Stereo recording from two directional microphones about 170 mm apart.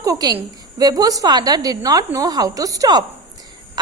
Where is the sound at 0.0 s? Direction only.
20° right (ahead or behind).